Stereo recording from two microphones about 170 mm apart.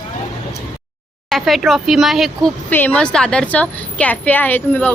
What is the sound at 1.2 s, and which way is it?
Speech, centre (ahead or behind).